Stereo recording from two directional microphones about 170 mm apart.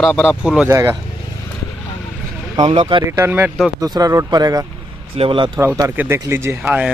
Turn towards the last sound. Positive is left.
turn(degrees=-10)  # may be behind; listen again after turning